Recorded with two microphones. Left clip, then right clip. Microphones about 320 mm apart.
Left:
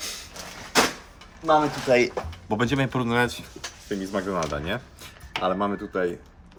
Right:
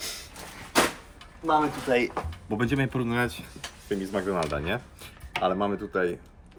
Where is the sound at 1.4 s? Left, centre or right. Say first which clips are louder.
Left 4 dB; left.